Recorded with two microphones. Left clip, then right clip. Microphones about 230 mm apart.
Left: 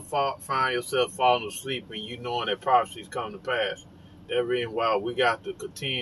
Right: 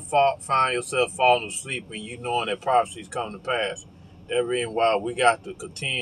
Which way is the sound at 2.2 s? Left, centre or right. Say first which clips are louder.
Right 3 dB; centre.